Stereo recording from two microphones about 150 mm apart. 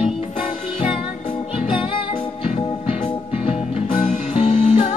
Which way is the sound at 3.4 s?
55° left (ahead or behind).